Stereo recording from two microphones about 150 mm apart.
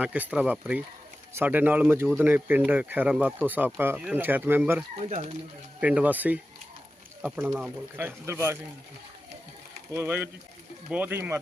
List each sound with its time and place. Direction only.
0.0 s speech: 10° right (ahead or behind)
5.0 s speech: 50° right (ahead or behind)
5.8 s speech: 10° right (ahead or behind)
9.9 s speech: 15° right (ahead or behind)